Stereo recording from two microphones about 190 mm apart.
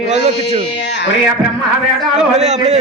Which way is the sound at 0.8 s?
65° left (ahead or behind).